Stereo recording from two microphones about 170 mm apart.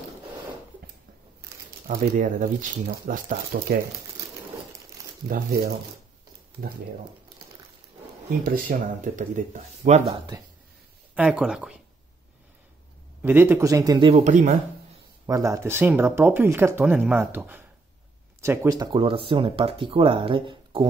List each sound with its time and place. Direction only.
1.9 s speech: 50° right (ahead or behind)
5.3 s speech: 65° right (ahead or behind)
8.5 s speech: 50° right (ahead or behind)
11.1 s speech: 5° right (ahead or behind)
13.2 s speech: 10° right (ahead or behind)
14.0 s speech: 40° right (ahead or behind)
15.2 s speech: 20° right (ahead or behind)